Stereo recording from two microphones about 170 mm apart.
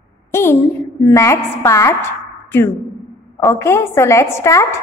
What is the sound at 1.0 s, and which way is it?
A woman's voice, 15° left (ahead or behind).